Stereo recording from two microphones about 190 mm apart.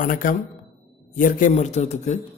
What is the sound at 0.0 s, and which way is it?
A man's voice, 45° left (ahead or behind).